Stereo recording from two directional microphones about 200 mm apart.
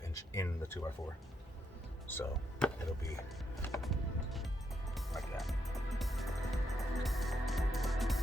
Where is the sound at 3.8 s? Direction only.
Centre (ahead or behind).